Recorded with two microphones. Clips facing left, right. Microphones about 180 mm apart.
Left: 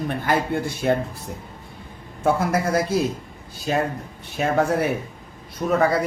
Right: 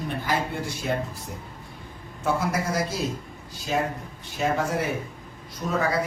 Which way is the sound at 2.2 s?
55° left (ahead or behind).